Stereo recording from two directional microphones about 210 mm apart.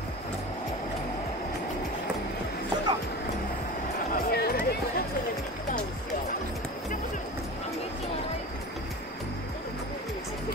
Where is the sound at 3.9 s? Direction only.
45° left (ahead or behind).